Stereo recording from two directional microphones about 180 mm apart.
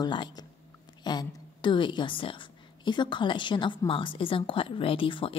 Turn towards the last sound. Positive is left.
turn(degrees=30)  # may be behind; listen again after turning